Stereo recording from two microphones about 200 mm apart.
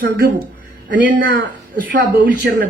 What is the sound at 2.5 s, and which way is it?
Speech, 55° right (ahead or behind).